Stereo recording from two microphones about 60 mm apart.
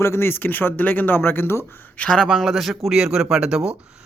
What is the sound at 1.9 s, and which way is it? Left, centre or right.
Speech, centre.